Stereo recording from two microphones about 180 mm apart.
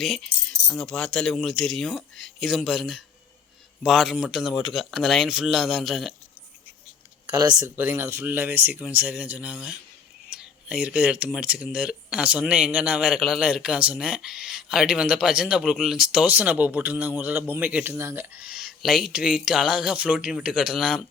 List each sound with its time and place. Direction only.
0.0 s speech: centre (ahead or behind)
7.3 s speech: 20° right (ahead or behind); by 21.0 s centre (ahead or behind)